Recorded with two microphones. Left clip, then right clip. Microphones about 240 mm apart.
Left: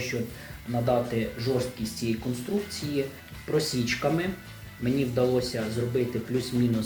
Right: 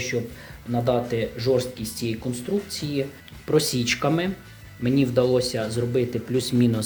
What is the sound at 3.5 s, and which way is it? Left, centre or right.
Speech, right.